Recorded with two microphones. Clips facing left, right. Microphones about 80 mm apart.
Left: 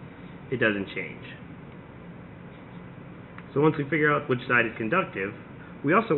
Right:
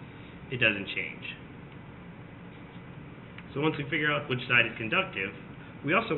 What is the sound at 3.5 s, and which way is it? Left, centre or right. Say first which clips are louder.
A man's voice: left 7 dB; left.